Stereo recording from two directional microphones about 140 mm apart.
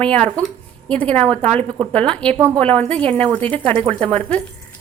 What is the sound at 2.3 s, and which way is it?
Speech, 20° right (ahead or behind).